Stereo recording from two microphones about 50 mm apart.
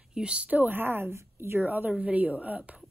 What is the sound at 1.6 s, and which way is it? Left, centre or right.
A woman's voice, right.